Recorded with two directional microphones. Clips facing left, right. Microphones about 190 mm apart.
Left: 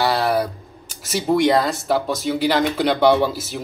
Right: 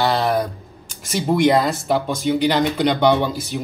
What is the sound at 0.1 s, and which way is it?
Speech, 5° left (ahead or behind).